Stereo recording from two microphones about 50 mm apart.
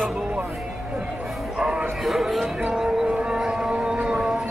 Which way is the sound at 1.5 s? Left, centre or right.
Centre.